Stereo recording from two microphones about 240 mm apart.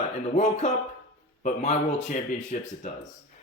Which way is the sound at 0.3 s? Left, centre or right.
Left.